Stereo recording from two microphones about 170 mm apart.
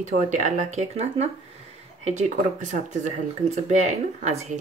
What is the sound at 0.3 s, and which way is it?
Speech, 45° right (ahead or behind).